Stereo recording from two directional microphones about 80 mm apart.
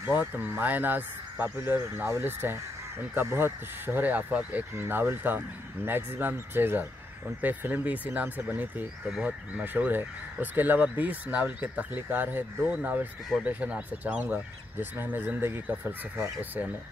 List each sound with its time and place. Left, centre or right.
0.2 s speech: right